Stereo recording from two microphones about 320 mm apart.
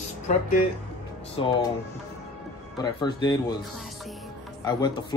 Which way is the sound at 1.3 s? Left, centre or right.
Centre.